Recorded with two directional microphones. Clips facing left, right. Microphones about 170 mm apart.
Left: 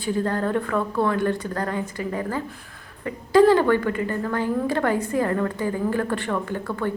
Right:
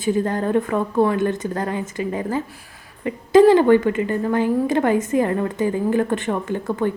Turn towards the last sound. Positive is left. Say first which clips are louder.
# right 4 dB
turn(degrees=-20)  # may be behind; listen again after turning